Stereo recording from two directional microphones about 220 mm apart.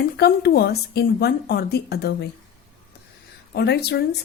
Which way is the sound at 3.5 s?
50° left (ahead or behind).